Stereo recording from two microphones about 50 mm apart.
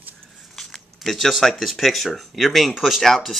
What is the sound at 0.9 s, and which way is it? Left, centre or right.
Speech, centre.